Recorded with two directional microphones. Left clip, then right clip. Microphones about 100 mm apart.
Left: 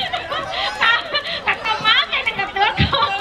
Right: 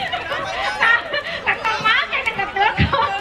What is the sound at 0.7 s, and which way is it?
Chatter, 45° left (ahead or behind).